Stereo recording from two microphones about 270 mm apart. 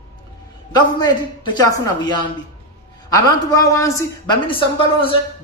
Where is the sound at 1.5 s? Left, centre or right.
Centre.